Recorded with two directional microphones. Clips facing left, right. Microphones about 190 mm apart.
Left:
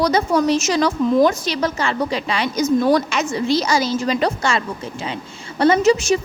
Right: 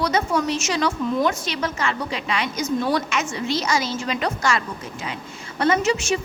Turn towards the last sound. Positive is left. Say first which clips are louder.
# left 6 dB
turn(degrees=35)  # may be behind; listen again after turning